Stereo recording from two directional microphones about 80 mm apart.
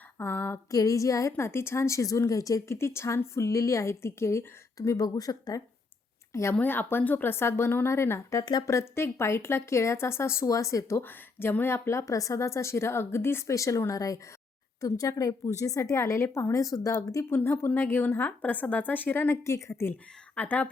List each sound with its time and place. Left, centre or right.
0.2 s speech: left
0.7 s a woman's voice: left
2.7 s speech: left
6.5 s speech: left
8.4 s speech: left
8.6 s speech: left
10.4 s a woman's voice: left
11.0 s a woman's voice: left
17.2 s speech: left
20.3 s a woman's voice: centre